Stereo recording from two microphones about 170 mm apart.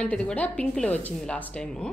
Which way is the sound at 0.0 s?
5° left (ahead or behind).